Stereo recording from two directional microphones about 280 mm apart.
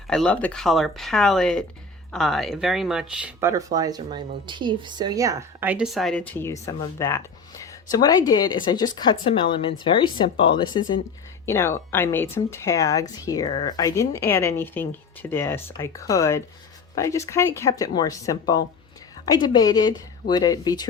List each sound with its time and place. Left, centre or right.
0.1 s speech: centre